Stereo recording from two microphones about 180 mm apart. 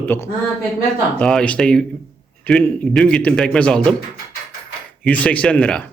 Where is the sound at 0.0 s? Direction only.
10° left (ahead or behind).